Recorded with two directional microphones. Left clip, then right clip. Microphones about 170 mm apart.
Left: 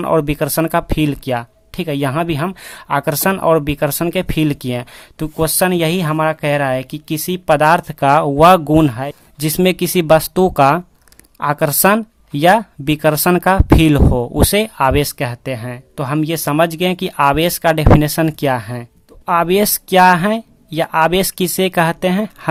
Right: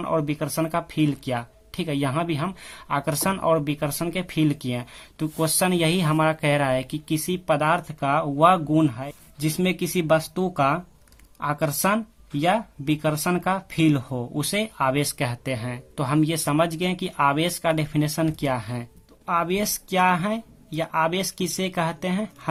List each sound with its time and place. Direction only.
0.0 s speech: 40° left (ahead or behind)
19.2 s speech: 45° left (ahead or behind)